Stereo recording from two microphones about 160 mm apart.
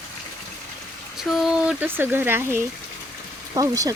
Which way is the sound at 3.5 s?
20° right (ahead or behind).